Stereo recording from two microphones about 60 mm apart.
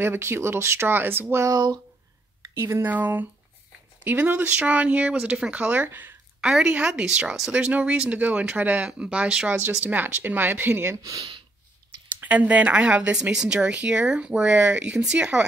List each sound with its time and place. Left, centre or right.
0.0 s speech: right
1.5 s speech: right
2.4 s speech: right
2.8 s speech: right
6.4 s speech: centre
9.5 s speech: right
11.0 s speech: right
12.2 s speech: right